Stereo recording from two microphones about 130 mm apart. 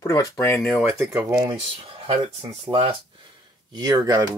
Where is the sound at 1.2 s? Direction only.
15° right (ahead or behind).